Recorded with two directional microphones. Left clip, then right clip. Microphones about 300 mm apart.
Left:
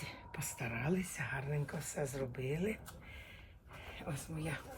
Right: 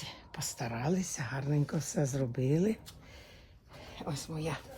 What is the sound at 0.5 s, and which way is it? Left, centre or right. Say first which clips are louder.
Speech: right 4 dB; right.